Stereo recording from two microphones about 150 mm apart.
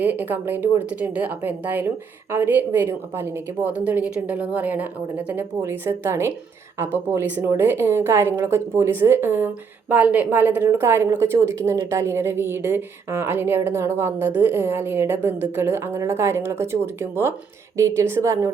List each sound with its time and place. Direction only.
0.0 s a woman's voice: 10° right (ahead or behind)